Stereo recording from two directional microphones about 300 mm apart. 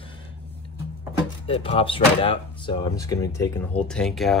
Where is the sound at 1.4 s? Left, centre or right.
Centre.